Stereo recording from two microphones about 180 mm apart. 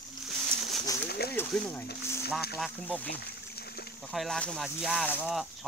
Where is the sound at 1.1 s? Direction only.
60° left (ahead or behind).